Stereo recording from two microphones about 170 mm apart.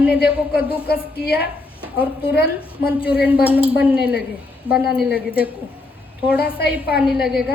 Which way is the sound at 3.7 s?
10° right (ahead or behind).